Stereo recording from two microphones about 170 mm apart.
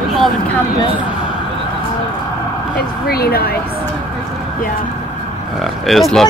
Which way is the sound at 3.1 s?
65° left (ahead or behind).